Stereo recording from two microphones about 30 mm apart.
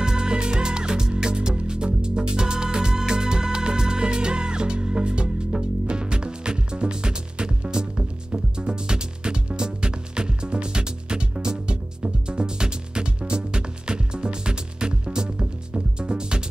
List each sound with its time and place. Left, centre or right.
0.0 s music: right